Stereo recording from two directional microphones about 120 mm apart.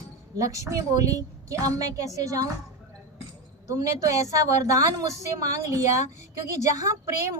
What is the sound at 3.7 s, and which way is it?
A woman's voice, 30° right (ahead or behind).